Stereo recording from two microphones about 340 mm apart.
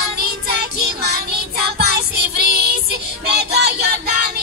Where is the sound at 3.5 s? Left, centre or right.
Right.